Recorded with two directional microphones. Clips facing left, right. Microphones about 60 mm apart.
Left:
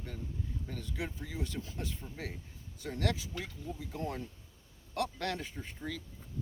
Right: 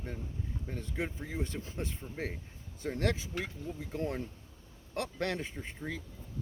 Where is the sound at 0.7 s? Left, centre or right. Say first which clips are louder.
Right 4 dB; right.